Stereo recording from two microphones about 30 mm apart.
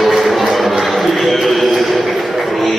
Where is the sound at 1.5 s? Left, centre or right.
Centre.